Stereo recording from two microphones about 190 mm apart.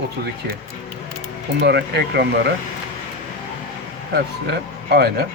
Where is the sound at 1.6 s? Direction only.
60° right (ahead or behind).